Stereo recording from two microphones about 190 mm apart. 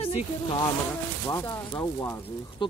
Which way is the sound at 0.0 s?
25° left (ahead or behind).